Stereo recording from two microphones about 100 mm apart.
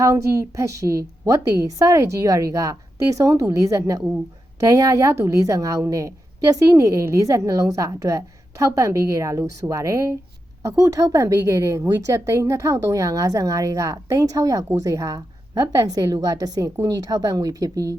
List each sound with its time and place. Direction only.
0.0 s a woman's voice: 30° right (ahead or behind)